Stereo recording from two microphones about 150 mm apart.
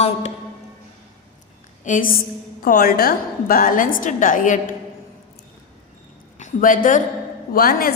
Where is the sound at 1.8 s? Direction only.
60° left (ahead or behind).